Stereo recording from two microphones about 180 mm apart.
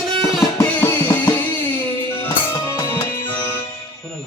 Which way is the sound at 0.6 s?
10° left (ahead or behind).